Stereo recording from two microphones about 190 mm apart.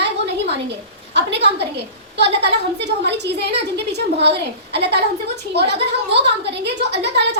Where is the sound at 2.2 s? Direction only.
65° right (ahead or behind).